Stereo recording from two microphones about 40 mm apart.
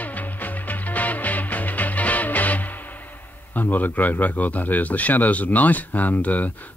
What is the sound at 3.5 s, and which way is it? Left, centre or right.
Speech, left.